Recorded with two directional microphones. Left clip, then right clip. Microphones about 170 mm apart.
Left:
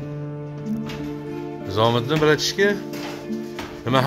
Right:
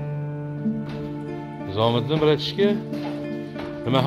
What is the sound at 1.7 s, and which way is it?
Speech, 5° right (ahead or behind).